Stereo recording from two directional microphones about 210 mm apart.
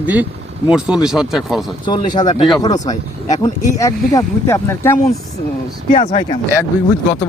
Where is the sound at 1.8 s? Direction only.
20° left (ahead or behind).